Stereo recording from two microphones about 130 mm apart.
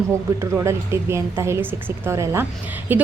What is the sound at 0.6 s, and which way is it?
A woman's voice, 20° right (ahead or behind).